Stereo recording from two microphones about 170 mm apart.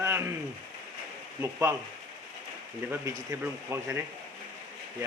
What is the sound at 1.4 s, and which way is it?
Speech, 15° right (ahead or behind).